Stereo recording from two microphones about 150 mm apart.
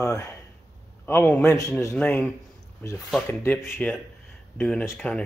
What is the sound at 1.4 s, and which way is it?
Speech, 20° left (ahead or behind).